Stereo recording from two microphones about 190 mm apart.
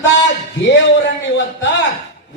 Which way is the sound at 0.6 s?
70° left (ahead or behind).